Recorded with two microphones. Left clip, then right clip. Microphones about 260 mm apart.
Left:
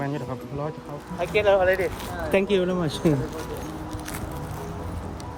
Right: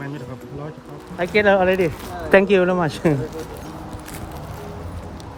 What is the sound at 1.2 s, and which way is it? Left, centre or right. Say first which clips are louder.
Speech: right 4 dB; right.